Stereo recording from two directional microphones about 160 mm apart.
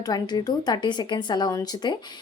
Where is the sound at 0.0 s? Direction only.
25° left (ahead or behind).